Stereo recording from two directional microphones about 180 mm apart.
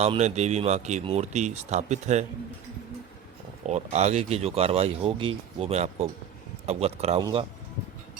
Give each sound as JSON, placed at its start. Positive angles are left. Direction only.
{"t": 0.0, "sound": "speech", "side_deg": -35}
{"t": 3.7, "sound": "speech", "side_deg": -40}
{"t": 7.2, "sound": "speech", "side_deg": -20}